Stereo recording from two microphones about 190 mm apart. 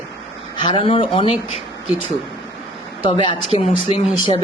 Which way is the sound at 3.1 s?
25° left (ahead or behind).